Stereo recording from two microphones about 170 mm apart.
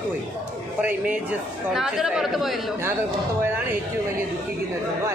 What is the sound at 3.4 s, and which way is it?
Speech, 15° right (ahead or behind).